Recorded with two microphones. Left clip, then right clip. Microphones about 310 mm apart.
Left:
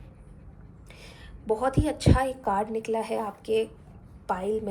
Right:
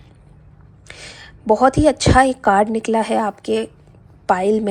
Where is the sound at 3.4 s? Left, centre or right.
Centre.